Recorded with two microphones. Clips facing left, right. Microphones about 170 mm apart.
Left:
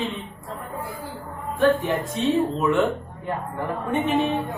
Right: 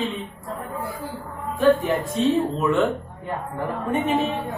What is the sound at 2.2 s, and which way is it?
Speech, centre (ahead or behind).